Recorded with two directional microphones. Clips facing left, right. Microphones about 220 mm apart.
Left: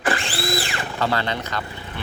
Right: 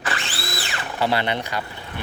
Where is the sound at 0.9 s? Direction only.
15° right (ahead or behind).